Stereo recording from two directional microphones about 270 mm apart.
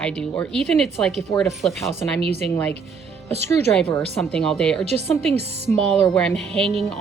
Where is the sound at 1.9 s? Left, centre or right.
Right.